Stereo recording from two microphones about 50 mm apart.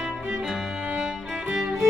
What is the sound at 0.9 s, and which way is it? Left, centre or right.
Music, right.